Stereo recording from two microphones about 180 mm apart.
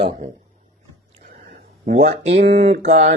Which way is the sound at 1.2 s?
55° right (ahead or behind).